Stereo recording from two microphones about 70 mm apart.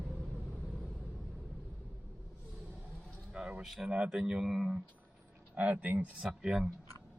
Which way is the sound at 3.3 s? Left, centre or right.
Centre.